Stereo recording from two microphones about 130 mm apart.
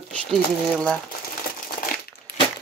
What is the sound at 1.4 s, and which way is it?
Crumpling, 90° left.